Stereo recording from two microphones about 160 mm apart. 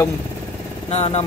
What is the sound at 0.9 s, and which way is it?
Speech, 40° left (ahead or behind).